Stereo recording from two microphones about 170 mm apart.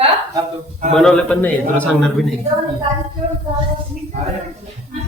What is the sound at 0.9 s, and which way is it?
A man's voice, 5° left (ahead or behind).